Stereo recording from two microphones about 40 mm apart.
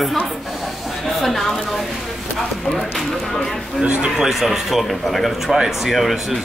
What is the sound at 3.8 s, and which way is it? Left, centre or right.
Speech, right.